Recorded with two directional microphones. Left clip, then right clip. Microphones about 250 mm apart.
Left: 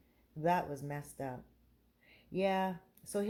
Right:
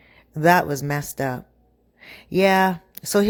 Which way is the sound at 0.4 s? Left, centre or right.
Right.